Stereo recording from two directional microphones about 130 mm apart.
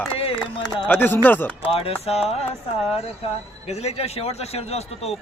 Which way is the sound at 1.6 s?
45° left (ahead or behind).